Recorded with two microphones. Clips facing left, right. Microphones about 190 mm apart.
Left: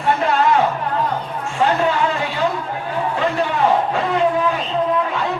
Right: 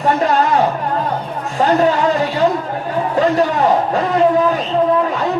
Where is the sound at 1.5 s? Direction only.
40° right (ahead or behind).